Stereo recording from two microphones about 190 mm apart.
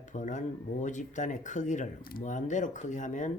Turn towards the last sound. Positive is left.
turn(degrees=40)  # may be behind; listen again after turning